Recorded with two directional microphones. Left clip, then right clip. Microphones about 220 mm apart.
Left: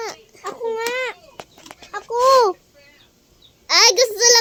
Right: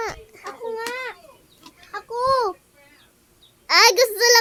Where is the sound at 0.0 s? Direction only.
25° right (ahead or behind).